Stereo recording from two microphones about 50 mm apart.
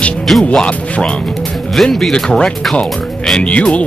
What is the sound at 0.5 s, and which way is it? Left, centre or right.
Music, left.